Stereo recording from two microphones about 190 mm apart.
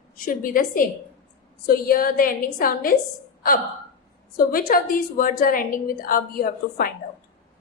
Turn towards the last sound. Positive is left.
turn(degrees=50)  # may be behind; listen again after turning